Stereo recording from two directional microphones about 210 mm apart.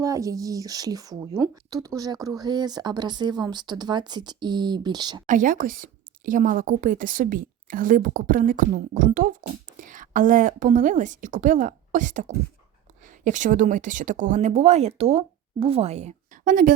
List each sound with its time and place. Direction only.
0.0 s speech: 15° right (ahead or behind)
5.2 s a woman's voice: 40° right (ahead or behind)
13.2 s a woman's voice: 35° right (ahead or behind)